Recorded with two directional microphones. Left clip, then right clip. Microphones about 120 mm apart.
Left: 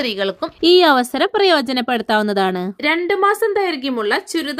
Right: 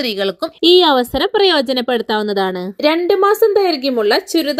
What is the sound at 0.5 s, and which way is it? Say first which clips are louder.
Speech: right 1 dB; 5° left (ahead or behind).